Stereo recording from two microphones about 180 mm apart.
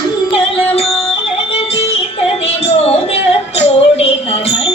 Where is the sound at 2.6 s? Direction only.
35° left (ahead or behind).